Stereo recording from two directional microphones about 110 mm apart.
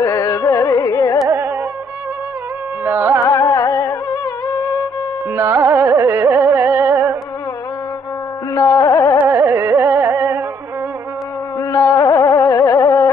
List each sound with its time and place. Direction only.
0.0 s carnatic music: 30° left (ahead or behind)
2.8 s carnatic music: 20° right (ahead or behind)
3.3 s humming: 30° left (ahead or behind)
5.3 s carnatic music: 20° right (ahead or behind)
8.5 s music: 30° left (ahead or behind)
9.2 s carnatic music: 20° right (ahead or behind)
11.7 s a sound: 30° left (ahead or behind)